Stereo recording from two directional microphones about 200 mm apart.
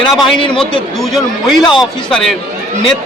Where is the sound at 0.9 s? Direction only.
Centre (ahead or behind).